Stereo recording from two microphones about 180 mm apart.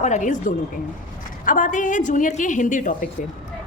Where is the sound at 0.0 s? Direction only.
40° left (ahead or behind).